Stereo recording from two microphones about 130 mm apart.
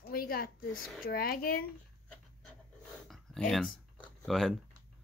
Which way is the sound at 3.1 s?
5° left (ahead or behind).